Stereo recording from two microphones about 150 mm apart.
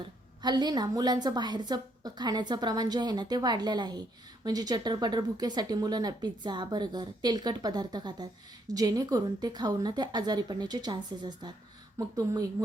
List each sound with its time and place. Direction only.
0.4 s speech: 30° right (ahead or behind)